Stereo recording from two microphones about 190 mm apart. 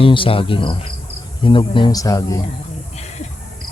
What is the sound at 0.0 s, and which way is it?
Speech, 30° left (ahead or behind).